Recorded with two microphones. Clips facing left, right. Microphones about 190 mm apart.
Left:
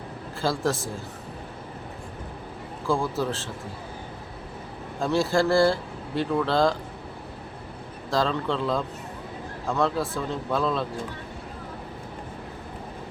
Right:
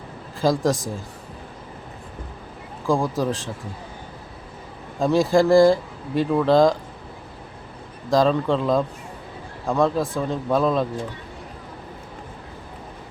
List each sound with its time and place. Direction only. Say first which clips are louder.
0.4 s speech: right 6 dB; 15° right (ahead or behind)
2.8 s speech: right 4 dB; 15° right (ahead or behind)
4.9 s speech: right 5 dB; 15° right (ahead or behind)
8.1 s speech: right 7 dB; 15° right (ahead or behind)